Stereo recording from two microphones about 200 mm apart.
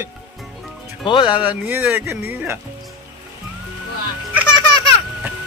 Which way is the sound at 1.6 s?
10° right (ahead or behind).